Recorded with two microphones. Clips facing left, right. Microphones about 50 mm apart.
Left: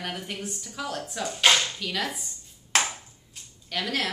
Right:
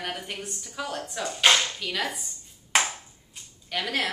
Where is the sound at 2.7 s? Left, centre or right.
Centre.